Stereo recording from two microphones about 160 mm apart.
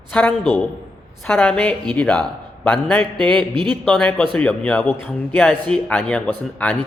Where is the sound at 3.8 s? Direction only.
5° left (ahead or behind).